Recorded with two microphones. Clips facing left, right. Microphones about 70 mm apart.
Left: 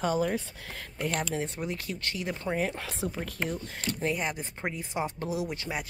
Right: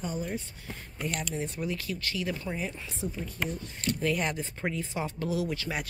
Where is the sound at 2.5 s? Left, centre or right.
Left.